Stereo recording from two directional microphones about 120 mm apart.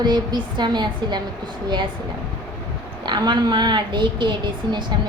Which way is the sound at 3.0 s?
40° right (ahead or behind).